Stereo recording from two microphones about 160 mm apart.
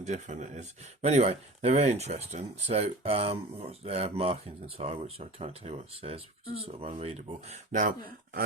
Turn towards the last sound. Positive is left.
turn(degrees=-55)  # may be behind; listen again after turning